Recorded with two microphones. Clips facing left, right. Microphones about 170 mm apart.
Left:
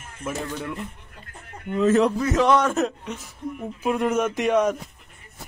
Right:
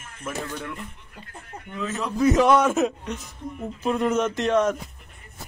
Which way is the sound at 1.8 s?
55° left (ahead or behind).